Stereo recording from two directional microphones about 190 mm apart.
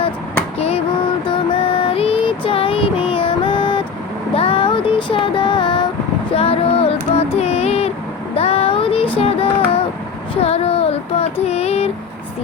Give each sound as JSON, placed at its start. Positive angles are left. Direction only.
{"t": 1.5, "sound": "child singing", "side_deg": 25}
{"t": 4.4, "sound": "music", "side_deg": 30}
{"t": 6.3, "sound": "child singing", "side_deg": 30}
{"t": 7.3, "sound": "a sound", "side_deg": 35}
{"t": 8.4, "sound": "child singing", "side_deg": 30}
{"t": 9.1, "sound": "yodeling", "side_deg": 30}
{"t": 10.4, "sound": "child singing", "side_deg": 30}